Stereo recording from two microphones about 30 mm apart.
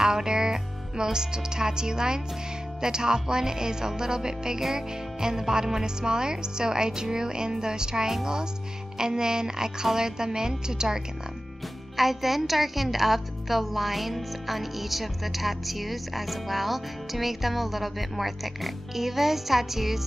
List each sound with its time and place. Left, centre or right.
0.0 s a woman's voice: right
12.0 s a woman's voice: centre